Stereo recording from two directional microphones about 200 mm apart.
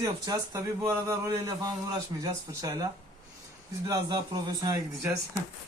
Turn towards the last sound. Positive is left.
turn(degrees=-15)  # may be behind; listen again after turning